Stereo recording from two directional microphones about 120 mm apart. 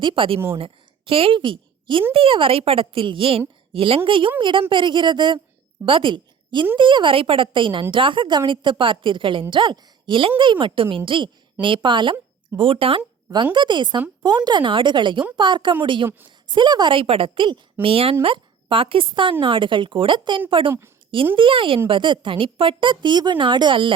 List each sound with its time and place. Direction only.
0.0 s a woman's voice: 45° right (ahead or behind)